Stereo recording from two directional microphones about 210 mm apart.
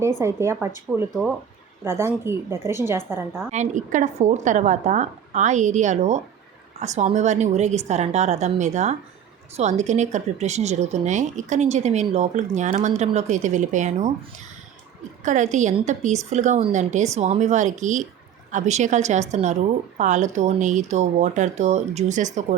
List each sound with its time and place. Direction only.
0.2 s a woman's voice: 10° right (ahead or behind)
1.8 s a woman's voice: 10° right (ahead or behind)
3.5 s speech: 35° right (ahead or behind)
15.2 s speech: 35° right (ahead or behind)